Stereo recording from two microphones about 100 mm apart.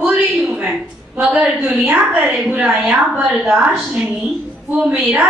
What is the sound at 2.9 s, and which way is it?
Speech, 15° right (ahead or behind).